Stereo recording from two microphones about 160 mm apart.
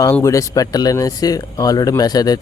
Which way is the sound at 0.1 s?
20° left (ahead or behind).